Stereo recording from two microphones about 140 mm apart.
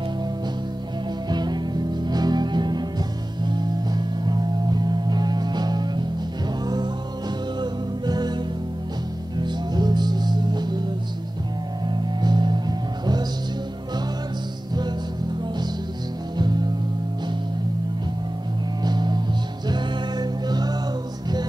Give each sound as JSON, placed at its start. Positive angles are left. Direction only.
{"t": 1.3, "sound": "music", "side_deg": -30}
{"t": 9.4, "sound": "music", "side_deg": -30}
{"t": 11.9, "sound": "music", "side_deg": -30}
{"t": 18.9, "sound": "music", "side_deg": -30}